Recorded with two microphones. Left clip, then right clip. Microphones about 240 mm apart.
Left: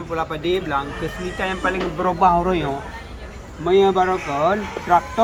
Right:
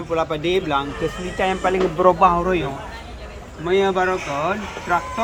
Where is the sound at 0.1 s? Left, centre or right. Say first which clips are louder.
Right 2 dB; right.